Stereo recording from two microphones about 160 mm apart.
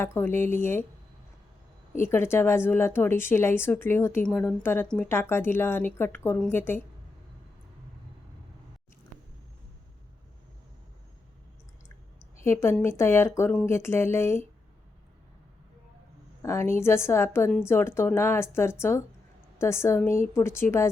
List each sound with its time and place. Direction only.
0.0 s a woman's voice: 15° left (ahead or behind)
2.0 s a woman's voice: 15° left (ahead or behind)
12.5 s a woman's voice: 15° left (ahead or behind)
16.4 s a woman's voice: 15° left (ahead or behind)